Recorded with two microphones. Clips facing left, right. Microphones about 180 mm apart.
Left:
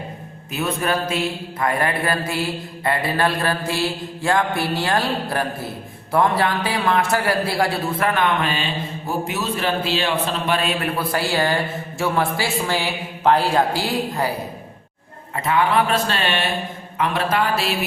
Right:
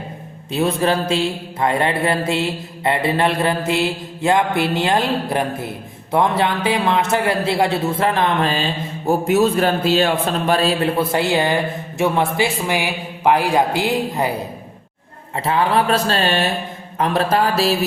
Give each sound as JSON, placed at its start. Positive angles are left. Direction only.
{"t": 0.5, "sound": "speech", "side_deg": -30}
{"t": 15.4, "sound": "mantra", "side_deg": -30}